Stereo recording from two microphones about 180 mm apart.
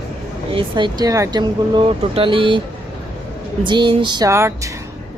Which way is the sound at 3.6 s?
25° right (ahead or behind).